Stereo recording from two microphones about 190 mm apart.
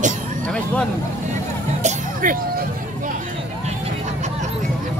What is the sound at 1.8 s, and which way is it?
Music, 45° right (ahead or behind).